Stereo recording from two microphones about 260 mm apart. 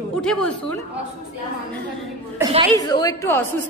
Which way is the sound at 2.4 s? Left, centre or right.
Centre.